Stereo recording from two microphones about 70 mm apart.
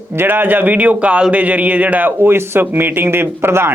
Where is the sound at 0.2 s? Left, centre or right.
Right.